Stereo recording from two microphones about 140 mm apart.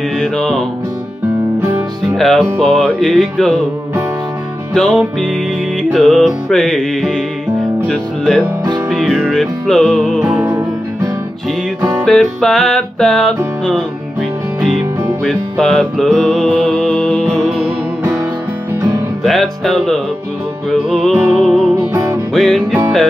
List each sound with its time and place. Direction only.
0.2 s music: 5° left (ahead or behind)
2.1 s music: centre (ahead or behind)
4.7 s music: 5° left (ahead or behind)
12.0 s music: 5° left (ahead or behind)
15.2 s music: 5° left (ahead or behind)
19.2 s music: centre (ahead or behind)
21.9 s music: 20° right (ahead or behind)
22.3 s music: centre (ahead or behind)